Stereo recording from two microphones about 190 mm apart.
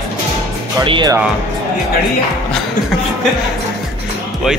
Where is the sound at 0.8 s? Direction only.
25° right (ahead or behind).